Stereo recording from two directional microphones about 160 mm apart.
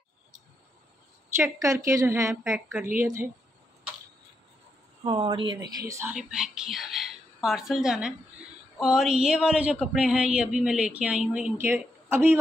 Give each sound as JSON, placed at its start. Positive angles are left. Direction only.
{"t": 1.3, "sound": "a woman's voice", "side_deg": -20}
{"t": 5.0, "sound": "speech", "side_deg": -25}
{"t": 6.1, "sound": "speech", "side_deg": -5}